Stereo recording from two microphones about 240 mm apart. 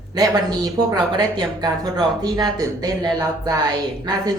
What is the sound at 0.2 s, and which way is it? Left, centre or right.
Speech, centre.